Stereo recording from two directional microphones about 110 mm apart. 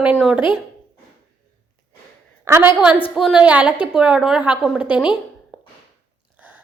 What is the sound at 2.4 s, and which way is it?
Speech, 20° right (ahead or behind).